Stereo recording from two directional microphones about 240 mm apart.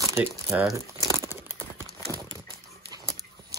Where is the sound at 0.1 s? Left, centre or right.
Centre.